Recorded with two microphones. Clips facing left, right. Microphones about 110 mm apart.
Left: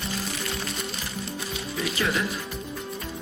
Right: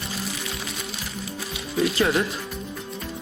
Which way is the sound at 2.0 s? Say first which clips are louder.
Right 4 dB; 35° right (ahead or behind).